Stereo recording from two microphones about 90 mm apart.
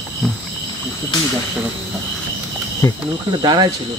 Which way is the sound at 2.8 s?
35° left (ahead or behind).